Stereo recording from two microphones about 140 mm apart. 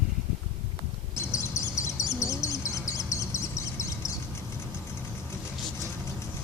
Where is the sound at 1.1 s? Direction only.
20° left (ahead or behind).